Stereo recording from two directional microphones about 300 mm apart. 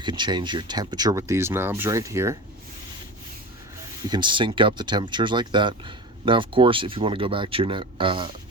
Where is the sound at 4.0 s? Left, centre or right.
Centre.